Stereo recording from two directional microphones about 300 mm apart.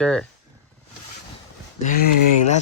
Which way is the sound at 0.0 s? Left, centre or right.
Centre.